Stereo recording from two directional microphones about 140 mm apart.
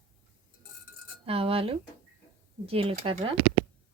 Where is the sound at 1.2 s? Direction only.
40° right (ahead or behind).